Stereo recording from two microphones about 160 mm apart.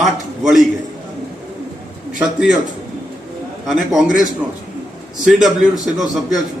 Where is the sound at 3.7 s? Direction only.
Centre (ahead or behind).